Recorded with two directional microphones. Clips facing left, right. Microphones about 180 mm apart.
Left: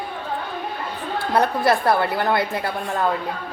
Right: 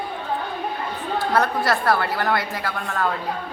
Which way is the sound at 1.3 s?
20° left (ahead or behind).